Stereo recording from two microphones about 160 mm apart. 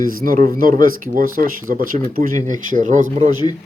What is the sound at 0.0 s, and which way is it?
Speech, 60° right (ahead or behind).